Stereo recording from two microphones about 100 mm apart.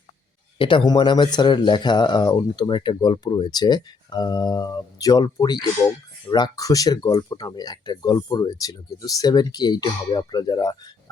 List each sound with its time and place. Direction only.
0.6 s speech: 55° left (ahead or behind)